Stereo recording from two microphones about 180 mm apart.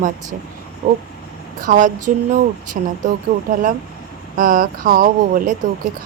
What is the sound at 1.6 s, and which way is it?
A woman's voice, 45° right (ahead or behind).